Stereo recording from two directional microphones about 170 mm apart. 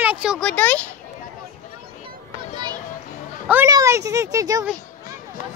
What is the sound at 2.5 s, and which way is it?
Children playing, 25° right (ahead or behind).